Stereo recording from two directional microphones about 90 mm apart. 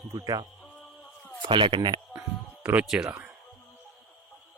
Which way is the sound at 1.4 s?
65° right (ahead or behind).